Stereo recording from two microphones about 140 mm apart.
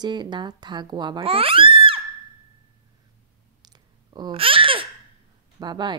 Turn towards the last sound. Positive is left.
turn(degrees=-30)  # may be behind; listen again after turning